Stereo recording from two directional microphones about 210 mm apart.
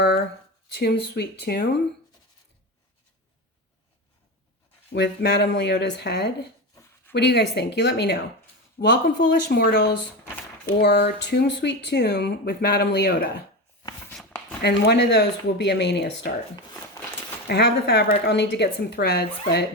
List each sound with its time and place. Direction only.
0.7 s speech: 50° left (ahead or behind)
4.9 s speech: 55° left (ahead or behind)
14.1 s a sound: 5° left (ahead or behind)
14.6 s speech: 50° left (ahead or behind)
17.0 s a sound: 15° left (ahead or behind)
17.5 s speech: 50° left (ahead or behind)